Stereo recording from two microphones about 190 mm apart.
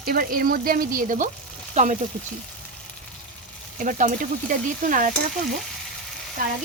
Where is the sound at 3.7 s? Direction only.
45° right (ahead or behind).